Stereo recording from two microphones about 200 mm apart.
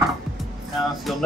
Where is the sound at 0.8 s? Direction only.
Centre (ahead or behind).